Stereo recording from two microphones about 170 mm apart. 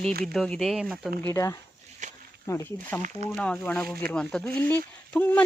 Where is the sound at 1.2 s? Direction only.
15° left (ahead or behind).